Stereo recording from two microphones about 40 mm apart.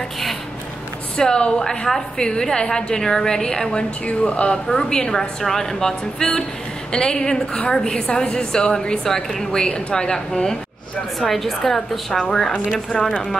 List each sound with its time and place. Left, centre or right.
1.1 s a woman's voice: left
4.0 s a woman's voice: left
11.1 s a woman's voice: centre